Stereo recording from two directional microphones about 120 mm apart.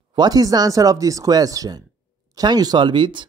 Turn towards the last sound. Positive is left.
turn(degrees=-40)  # may be behind; listen again after turning